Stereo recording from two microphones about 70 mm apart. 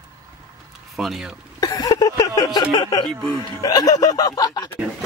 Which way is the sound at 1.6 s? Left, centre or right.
Left.